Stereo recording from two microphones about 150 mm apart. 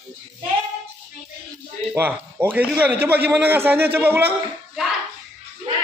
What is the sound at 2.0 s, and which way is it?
Speech, 10° right (ahead or behind).